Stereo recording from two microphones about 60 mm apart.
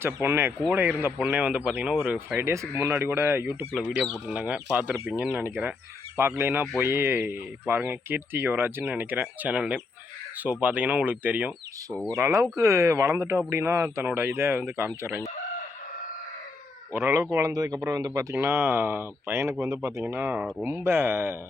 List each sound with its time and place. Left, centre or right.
0.0 s speech: right
2.4 s speech: right
2.9 s speech: right
4.3 s speech: centre
5.3 s speech: right
12.1 s speech: right
16.9 s speech: right
17.4 s speech: right
18.3 s speech: right
19.6 s speech: right
20.1 s speech: right